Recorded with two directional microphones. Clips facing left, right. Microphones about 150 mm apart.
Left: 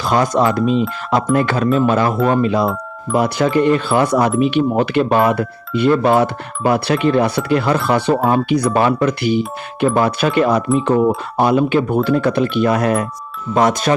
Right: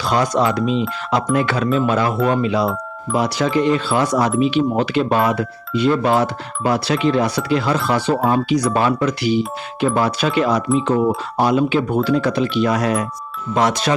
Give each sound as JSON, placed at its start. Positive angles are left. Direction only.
{"t": 0.0, "sound": "speech", "side_deg": 50}